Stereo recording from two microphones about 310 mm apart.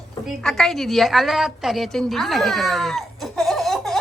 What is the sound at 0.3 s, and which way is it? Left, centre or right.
A woman's voice, centre.